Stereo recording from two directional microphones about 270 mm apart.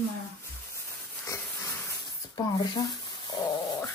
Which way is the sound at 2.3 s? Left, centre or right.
Centre.